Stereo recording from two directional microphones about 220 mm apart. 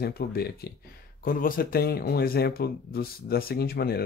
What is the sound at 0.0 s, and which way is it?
Speech, 45° left (ahead or behind).